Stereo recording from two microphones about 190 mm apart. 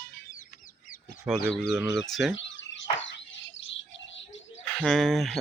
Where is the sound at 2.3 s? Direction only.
75° left (ahead or behind).